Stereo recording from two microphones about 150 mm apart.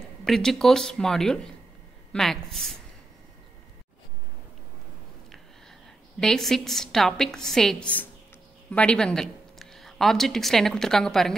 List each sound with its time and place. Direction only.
0.2 s a woman's voice: centre (ahead or behind)
6.1 s a woman's voice: centre (ahead or behind)